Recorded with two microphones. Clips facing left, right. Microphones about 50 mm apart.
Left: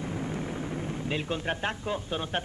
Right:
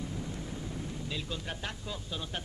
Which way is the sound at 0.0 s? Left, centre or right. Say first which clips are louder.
Left 6 dB; left.